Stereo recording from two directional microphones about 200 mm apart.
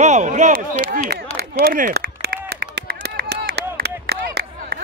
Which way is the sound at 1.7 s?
45° right (ahead or behind).